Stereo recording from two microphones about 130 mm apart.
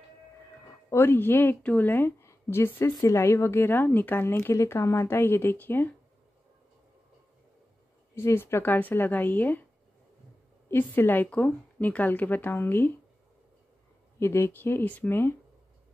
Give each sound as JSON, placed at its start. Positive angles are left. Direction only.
{"t": 0.8, "sound": "a woman's voice", "side_deg": 15}
{"t": 8.1, "sound": "a woman's voice", "side_deg": 20}
{"t": 10.7, "sound": "a woman's voice", "side_deg": 15}
{"t": 14.2, "sound": "a woman's voice", "side_deg": 20}